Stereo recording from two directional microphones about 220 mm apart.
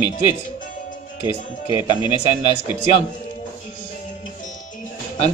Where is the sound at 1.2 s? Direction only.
20° left (ahead or behind).